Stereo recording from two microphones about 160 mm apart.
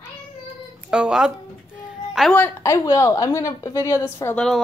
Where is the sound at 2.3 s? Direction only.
15° left (ahead or behind).